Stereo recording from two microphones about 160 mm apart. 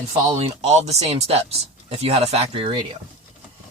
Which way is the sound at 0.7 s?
40° right (ahead or behind).